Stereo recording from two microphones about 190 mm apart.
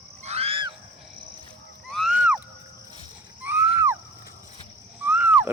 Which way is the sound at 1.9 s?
Centre (ahead or behind).